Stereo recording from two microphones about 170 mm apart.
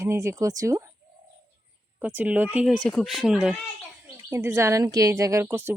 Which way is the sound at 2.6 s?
5° left (ahead or behind).